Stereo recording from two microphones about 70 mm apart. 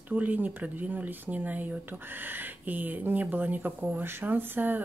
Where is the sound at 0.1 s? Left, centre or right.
Right.